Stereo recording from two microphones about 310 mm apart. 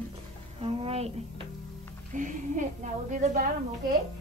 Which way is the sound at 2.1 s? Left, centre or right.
Right.